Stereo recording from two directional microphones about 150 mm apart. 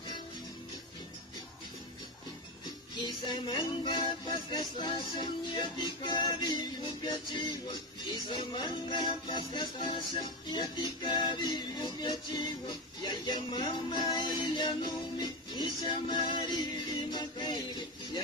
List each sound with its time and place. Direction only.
3.0 s music: 30° left (ahead or behind)